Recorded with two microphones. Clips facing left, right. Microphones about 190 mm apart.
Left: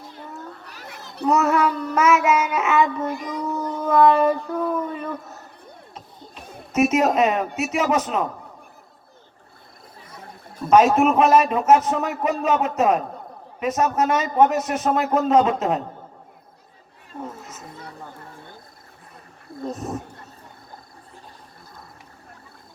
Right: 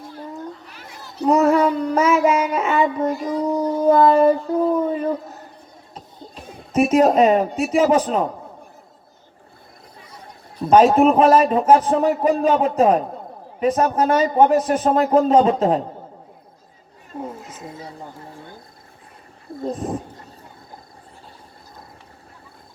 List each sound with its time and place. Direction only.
1.2 s a man's voice: 30° right (ahead or behind)
10.7 s a man's voice: 30° right (ahead or behind)
17.2 s a sound: 10° right (ahead or behind)
19.6 s speech: 30° right (ahead or behind)